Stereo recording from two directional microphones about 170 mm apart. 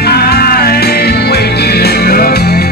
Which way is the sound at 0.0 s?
70° left (ahead or behind).